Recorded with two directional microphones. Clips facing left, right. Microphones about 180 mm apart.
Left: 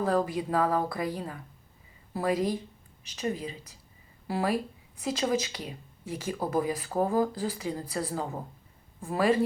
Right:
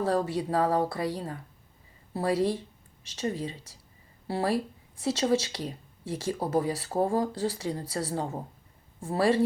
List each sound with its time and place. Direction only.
0.0 s speech: 30° right (ahead or behind)
4.3 s speech: 30° right (ahead or behind)